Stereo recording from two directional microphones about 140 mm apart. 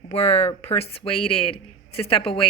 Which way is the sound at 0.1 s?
50° left (ahead or behind).